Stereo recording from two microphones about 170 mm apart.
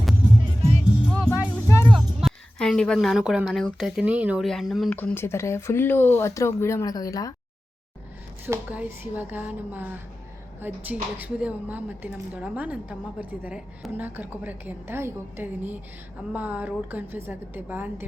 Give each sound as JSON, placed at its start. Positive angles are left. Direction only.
{"t": 0.6, "sound": "music", "side_deg": -40}
{"t": 1.3, "sound": "music", "side_deg": 15}
{"t": 1.9, "sound": "a woman's voice", "side_deg": 0}
{"t": 4.9, "sound": "speech", "side_deg": 10}
{"t": 8.4, "sound": "a woman's voice", "side_deg": -10}